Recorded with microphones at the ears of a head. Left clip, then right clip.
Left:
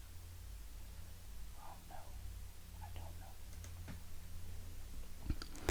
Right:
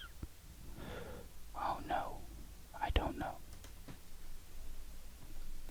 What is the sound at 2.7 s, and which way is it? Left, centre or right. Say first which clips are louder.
Whispering: right 19 dB; right.